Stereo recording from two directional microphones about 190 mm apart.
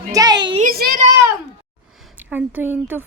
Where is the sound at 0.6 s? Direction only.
50° right (ahead or behind).